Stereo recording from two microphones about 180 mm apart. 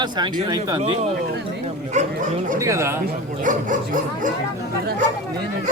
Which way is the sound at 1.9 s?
45° right (ahead or behind).